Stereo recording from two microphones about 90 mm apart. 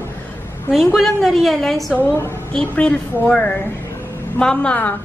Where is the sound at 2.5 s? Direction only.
15° left (ahead or behind).